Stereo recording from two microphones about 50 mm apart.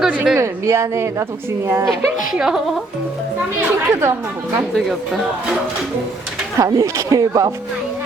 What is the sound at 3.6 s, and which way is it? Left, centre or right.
Speech, right.